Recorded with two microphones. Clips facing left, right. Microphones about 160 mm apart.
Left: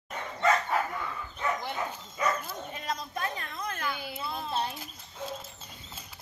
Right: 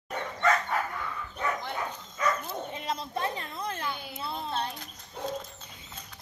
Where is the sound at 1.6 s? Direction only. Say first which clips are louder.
Even; 10° left (ahead or behind).